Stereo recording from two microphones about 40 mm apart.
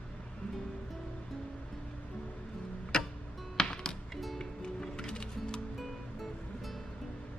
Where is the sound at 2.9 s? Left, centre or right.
Centre.